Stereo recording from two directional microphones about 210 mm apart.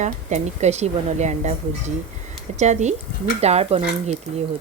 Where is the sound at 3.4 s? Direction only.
30° right (ahead or behind).